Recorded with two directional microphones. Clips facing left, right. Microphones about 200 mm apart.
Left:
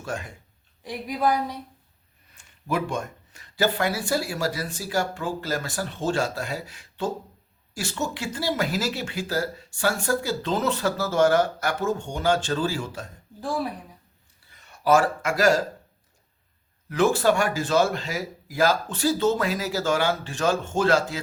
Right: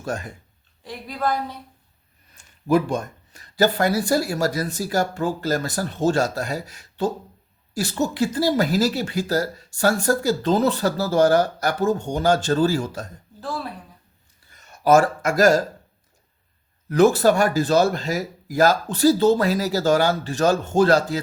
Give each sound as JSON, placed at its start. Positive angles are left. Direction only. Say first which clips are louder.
{"t": 0.0, "sound": "speech", "louder": "right 4 dB", "side_deg": -40}
{"t": 0.8, "sound": "speech", "louder": "left 1 dB", "side_deg": 15}
{"t": 2.3, "sound": "speech", "louder": "right 8 dB", "side_deg": -40}
{"t": 13.4, "sound": "speech", "louder": "left 2 dB", "side_deg": 15}
{"t": 14.5, "sound": "speech", "louder": "right 4 dB", "side_deg": -45}
{"t": 16.9, "sound": "speech", "louder": "right 5 dB", "side_deg": -40}